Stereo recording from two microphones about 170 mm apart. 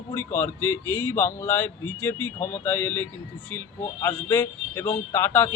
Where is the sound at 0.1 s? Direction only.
15° left (ahead or behind).